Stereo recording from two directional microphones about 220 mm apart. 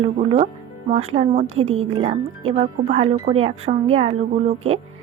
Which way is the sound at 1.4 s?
65° right (ahead or behind).